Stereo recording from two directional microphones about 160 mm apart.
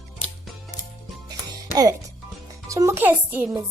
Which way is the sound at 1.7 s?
20° right (ahead or behind).